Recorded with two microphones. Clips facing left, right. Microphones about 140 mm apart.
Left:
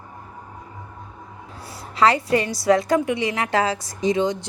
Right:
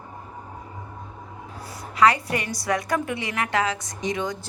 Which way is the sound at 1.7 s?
30° left (ahead or behind).